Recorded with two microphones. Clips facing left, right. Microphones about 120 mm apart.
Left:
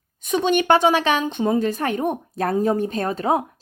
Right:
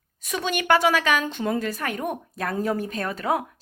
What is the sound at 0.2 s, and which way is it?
Speech, 25° left (ahead or behind).